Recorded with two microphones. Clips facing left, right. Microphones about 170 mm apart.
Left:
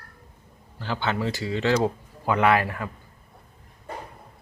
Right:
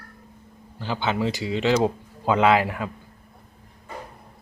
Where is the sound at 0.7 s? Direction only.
10° right (ahead or behind).